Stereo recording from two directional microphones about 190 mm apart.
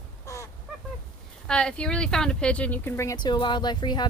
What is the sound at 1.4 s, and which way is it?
Speech, 5° left (ahead or behind).